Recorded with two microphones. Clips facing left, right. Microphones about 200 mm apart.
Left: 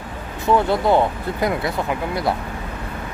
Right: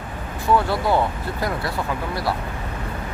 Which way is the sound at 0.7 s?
20° left (ahead or behind).